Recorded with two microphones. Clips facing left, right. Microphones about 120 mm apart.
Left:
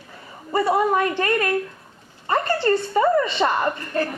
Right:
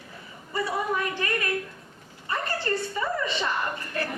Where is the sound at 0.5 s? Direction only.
60° left (ahead or behind).